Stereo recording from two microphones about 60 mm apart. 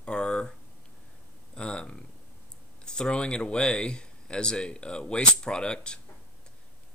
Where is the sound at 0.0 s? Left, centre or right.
Centre.